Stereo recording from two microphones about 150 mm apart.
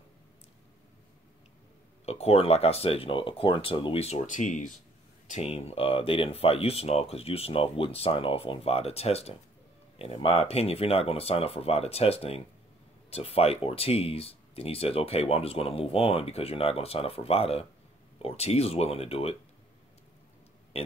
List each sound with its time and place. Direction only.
2.0 s speech: 45° left (ahead or behind)
5.3 s speech: 45° left (ahead or behind)